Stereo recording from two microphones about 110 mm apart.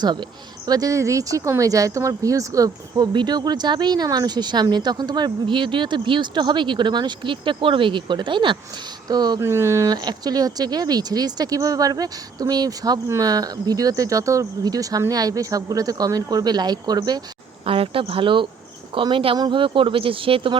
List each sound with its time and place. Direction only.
0.7 s speech: 30° right (ahead or behind)
3.1 s speech: 40° right (ahead or behind)
9.4 s speech: 25° right (ahead or behind)
9.9 s speech: 40° right (ahead or behind)
17.7 s speech: 55° right (ahead or behind)